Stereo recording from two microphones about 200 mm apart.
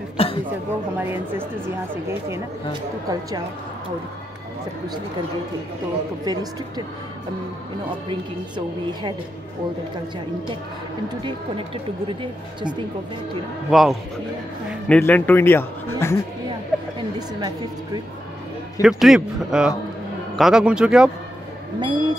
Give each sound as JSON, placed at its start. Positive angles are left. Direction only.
{"t": 0.2, "sound": "a sound", "side_deg": 30}
{"t": 0.9, "sound": "speech", "side_deg": -10}
{"t": 6.2, "sound": "speech", "side_deg": -20}
{"t": 8.1, "sound": "speech", "side_deg": -25}
{"t": 11.2, "sound": "speech", "side_deg": -25}
{"t": 13.7, "sound": "a man's voice", "side_deg": 0}
{"t": 18.8, "sound": "a man's voice", "side_deg": 0}
{"t": 21.7, "sound": "speech", "side_deg": -20}